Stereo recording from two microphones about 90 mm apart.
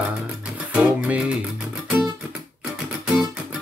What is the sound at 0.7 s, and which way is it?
Music, 15° right (ahead or behind).